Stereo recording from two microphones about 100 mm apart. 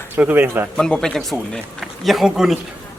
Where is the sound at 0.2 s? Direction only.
15° right (ahead or behind).